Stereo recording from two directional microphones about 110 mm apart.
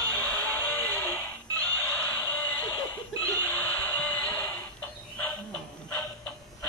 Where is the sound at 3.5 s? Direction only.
15° left (ahead or behind).